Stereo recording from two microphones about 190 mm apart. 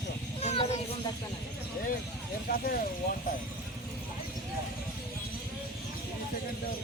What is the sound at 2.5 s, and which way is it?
Speech, 50° left (ahead or behind).